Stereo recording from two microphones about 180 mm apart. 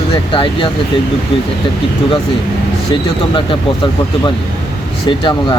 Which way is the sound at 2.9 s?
30° left (ahead or behind).